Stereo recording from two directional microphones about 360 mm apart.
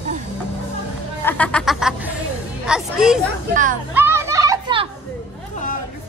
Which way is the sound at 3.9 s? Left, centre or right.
Centre.